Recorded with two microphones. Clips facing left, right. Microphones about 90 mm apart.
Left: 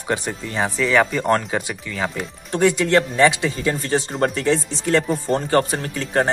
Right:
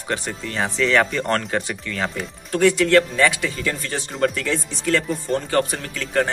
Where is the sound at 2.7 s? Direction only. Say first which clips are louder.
Right 2 dB; 20° left (ahead or behind).